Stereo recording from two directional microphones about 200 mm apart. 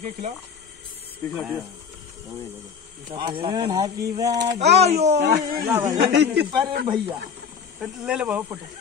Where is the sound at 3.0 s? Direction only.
25° right (ahead or behind).